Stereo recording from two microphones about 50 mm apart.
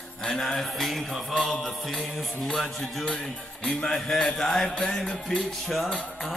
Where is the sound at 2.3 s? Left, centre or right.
Centre.